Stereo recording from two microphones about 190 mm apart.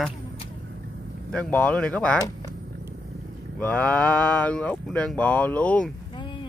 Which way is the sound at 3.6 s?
5° left (ahead or behind).